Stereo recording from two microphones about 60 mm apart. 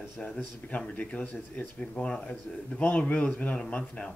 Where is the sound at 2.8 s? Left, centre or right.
Left.